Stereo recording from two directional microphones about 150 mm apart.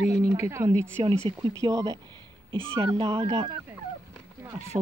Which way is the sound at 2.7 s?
35° right (ahead or behind).